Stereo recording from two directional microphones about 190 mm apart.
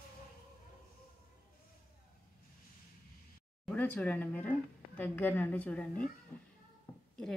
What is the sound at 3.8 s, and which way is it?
A woman's voice, 10° left (ahead or behind).